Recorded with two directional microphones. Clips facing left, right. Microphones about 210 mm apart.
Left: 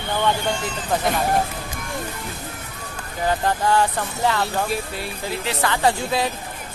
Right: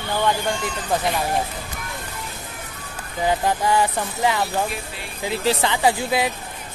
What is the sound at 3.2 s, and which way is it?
Speech, 10° right (ahead or behind).